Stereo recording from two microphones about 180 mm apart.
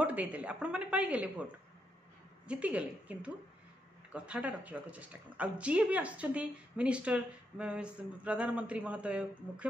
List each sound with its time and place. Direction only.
0.0 s speech: 10° right (ahead or behind)
2.4 s speech: 5° right (ahead or behind)